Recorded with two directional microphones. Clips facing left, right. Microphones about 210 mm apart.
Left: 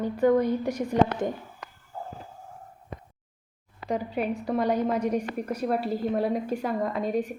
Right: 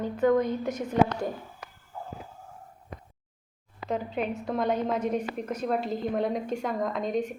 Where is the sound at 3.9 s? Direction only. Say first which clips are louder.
Left 2 dB; 10° left (ahead or behind).